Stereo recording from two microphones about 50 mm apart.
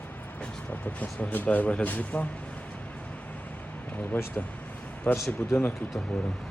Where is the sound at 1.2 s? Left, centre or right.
Left.